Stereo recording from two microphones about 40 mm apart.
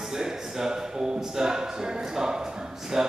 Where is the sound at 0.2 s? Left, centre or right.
Centre.